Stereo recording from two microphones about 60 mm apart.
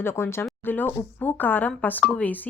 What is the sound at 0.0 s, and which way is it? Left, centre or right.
Speech, left.